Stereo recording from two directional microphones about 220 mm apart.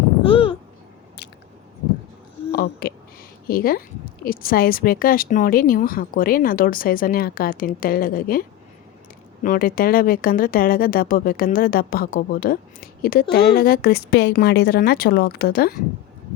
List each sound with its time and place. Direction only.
0.3 s babbling: 25° left (ahead or behind)
2.5 s a woman's voice: 45° left (ahead or behind)